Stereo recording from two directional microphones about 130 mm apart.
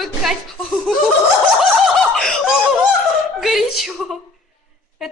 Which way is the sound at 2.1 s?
5° left (ahead or behind).